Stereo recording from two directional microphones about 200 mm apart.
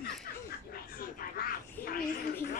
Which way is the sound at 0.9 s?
45° left (ahead or behind).